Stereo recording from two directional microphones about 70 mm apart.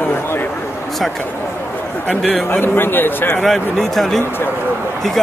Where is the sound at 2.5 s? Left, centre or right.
Left.